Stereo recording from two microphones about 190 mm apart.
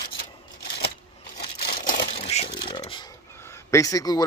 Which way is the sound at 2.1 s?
35° left (ahead or behind).